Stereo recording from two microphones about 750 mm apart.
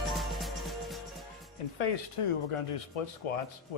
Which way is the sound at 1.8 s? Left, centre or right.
Left.